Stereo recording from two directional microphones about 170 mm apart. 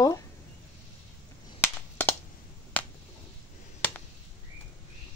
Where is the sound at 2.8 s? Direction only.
10° left (ahead or behind).